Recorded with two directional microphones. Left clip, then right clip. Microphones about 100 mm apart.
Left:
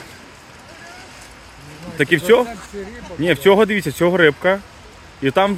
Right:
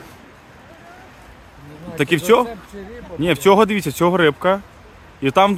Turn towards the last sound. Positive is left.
turn(degrees=-40)  # may be behind; listen again after turning